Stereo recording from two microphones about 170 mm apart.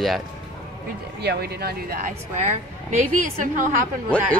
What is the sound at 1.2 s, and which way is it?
Speech, 70° right (ahead or behind).